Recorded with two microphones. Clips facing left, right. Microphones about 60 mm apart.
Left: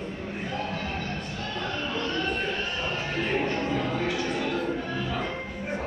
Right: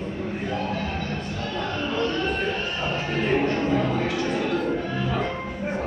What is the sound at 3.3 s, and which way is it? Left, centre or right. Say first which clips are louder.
Music: right 6 dB; right.